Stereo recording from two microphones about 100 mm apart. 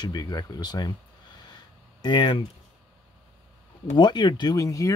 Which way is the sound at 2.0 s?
50° left (ahead or behind).